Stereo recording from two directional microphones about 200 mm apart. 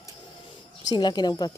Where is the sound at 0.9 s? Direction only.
20° left (ahead or behind).